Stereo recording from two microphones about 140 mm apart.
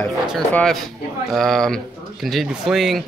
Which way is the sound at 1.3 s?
Centre (ahead or behind).